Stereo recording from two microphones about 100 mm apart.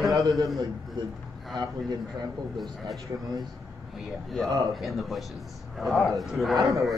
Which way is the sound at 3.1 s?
40° right (ahead or behind).